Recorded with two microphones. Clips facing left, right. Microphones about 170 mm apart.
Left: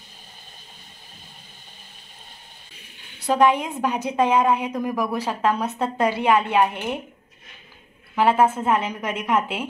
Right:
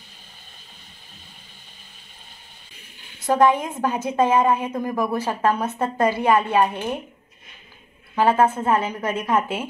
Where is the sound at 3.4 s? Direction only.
20° left (ahead or behind).